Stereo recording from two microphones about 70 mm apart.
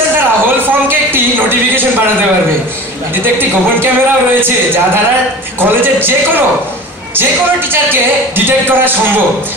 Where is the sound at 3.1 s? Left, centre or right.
Right.